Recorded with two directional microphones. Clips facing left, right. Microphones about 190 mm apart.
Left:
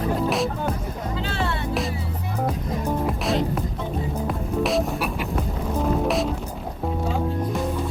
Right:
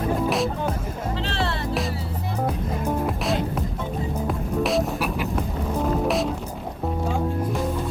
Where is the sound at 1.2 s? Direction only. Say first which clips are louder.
Left 1 dB; 35° right (ahead or behind).